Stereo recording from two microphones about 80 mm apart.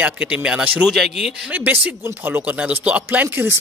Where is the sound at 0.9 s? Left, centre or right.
Centre.